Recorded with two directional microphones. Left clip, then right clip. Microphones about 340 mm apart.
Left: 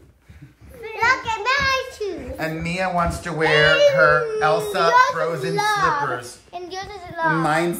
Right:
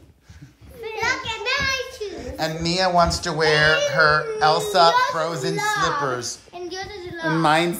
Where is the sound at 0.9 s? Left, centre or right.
Centre.